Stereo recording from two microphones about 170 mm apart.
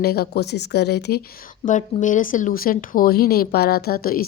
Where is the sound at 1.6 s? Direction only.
50° left (ahead or behind).